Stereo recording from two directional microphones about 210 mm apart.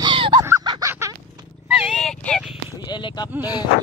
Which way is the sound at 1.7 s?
Centre (ahead or behind).